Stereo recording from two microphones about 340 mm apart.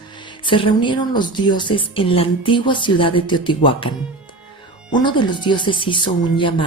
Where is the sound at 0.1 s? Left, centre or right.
Centre.